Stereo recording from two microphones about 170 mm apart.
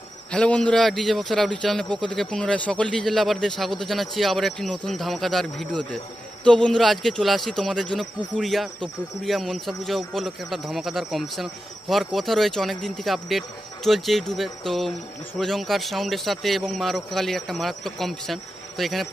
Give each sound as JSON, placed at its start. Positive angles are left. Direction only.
{"t": 0.3, "sound": "a man's voice", "side_deg": 5}